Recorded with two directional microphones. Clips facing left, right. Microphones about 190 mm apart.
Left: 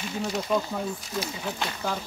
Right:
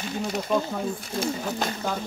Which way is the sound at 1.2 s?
40° right (ahead or behind).